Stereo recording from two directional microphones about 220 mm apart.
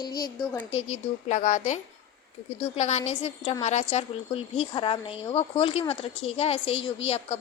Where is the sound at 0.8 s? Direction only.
30° left (ahead or behind).